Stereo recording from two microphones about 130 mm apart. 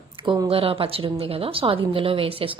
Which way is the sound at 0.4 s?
45° right (ahead or behind).